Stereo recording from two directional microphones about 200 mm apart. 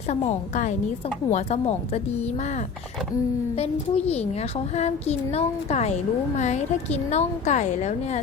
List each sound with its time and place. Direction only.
0.1 s a woman's voice: 35° left (ahead or behind)
3.6 s a woman's voice: 30° left (ahead or behind)